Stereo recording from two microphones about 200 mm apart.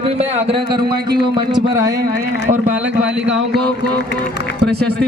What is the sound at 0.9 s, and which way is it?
Speech, 55° right (ahead or behind).